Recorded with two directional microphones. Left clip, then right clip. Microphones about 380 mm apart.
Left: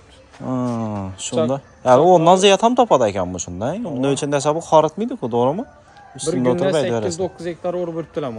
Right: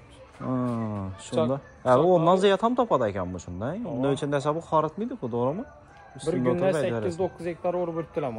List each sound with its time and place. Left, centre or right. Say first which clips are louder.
0.5 s a sound: left 6 dB; centre
1.5 s a man's voice: left 9 dB; centre
6.2 s speech: left 7 dB; left
6.9 s a man's voice: left 7 dB; centre
7.2 s speech: left 5 dB; left